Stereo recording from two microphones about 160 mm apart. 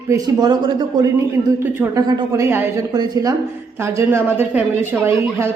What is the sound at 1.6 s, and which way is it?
A woman's voice, 15° right (ahead or behind).